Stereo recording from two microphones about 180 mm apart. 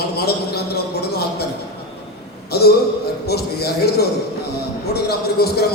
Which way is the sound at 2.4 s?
60° left (ahead or behind).